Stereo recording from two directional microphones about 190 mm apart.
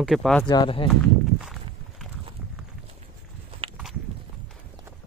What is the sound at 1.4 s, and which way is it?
Walk, centre (ahead or behind).